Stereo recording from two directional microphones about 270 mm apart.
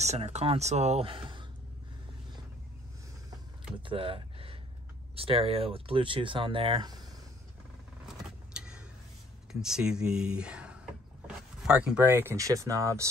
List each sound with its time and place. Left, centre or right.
0.0 s speech: right
3.7 s speech: centre
8.5 s vehicle: centre
9.5 s speech: centre